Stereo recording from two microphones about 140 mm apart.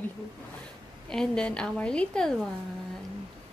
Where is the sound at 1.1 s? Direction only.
5° left (ahead or behind).